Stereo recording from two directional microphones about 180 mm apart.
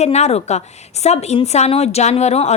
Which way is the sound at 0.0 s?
35° left (ahead or behind).